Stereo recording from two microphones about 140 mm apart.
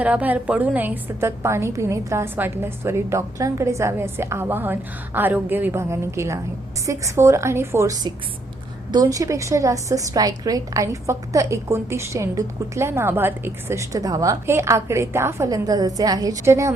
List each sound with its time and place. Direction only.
0.0 s a woman's voice: 10° right (ahead or behind)